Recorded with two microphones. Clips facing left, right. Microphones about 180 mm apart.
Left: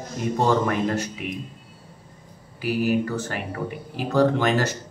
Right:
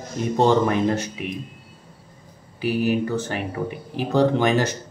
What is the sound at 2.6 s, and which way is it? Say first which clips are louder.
Speech: right 1 dB; 20° right (ahead or behind).